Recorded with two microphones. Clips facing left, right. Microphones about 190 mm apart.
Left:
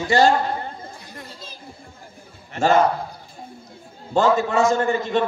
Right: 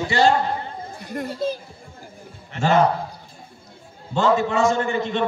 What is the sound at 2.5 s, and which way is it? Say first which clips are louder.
Speech: left 2 dB; 40° left (ahead or behind).